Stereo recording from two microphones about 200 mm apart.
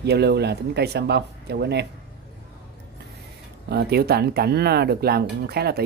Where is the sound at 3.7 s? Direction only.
55° right (ahead or behind).